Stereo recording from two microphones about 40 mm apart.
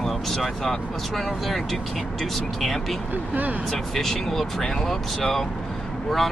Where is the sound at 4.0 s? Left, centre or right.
Centre.